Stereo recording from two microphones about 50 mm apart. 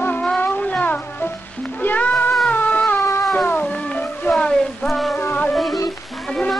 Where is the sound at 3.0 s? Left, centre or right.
Left.